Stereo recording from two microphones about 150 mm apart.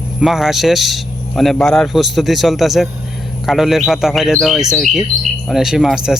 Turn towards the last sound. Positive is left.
turn(degrees=-5)  # may be behind; listen again after turning